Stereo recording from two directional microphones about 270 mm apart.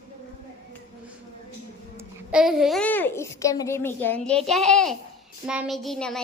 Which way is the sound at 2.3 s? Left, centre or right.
Centre.